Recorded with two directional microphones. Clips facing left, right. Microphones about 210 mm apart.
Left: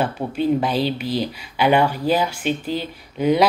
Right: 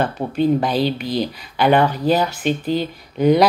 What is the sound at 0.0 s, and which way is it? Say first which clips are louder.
Speech: right 3 dB; 10° left (ahead or behind).